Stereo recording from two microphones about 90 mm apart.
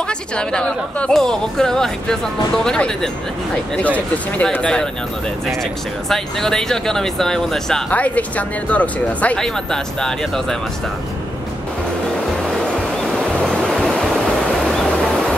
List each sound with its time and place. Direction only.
0.4 s speech: 10° left (ahead or behind)
7.9 s speech: 15° left (ahead or behind)
12.5 s waves: centre (ahead or behind)
14.4 s a sound: 5° left (ahead or behind)